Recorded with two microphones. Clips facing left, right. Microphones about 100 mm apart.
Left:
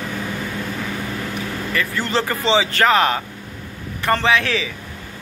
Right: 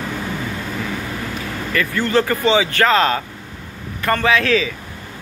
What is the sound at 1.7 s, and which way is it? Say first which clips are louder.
Speech: right 4 dB; 20° left (ahead or behind).